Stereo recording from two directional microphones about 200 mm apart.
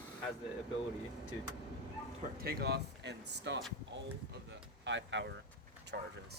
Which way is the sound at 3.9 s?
60° right (ahead or behind).